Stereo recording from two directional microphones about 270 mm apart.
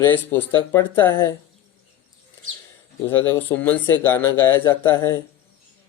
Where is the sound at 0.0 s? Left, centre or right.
Centre.